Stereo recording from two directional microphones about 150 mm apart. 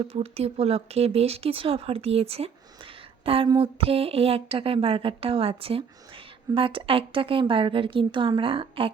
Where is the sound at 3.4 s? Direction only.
35° right (ahead or behind).